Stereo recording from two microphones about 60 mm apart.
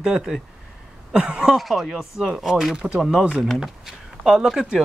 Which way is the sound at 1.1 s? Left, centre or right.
Centre.